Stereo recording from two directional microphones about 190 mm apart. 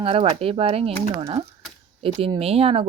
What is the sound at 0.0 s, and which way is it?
Speech, 30° right (ahead or behind).